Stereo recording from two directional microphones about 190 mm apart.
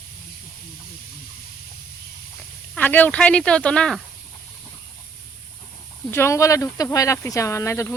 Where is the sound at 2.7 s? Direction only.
10° left (ahead or behind).